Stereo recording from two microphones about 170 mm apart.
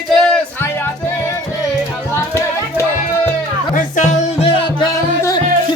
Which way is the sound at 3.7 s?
45° left (ahead or behind).